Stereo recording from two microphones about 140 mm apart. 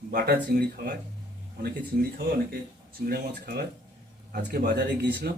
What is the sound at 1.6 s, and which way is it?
Speech, 90° right.